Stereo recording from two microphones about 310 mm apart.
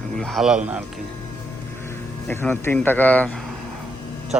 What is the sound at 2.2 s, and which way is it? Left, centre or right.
Speech, centre.